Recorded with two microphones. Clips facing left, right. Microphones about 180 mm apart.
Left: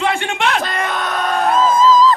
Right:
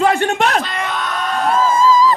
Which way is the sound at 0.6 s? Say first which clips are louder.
Left 2 dB; 45° left (ahead or behind).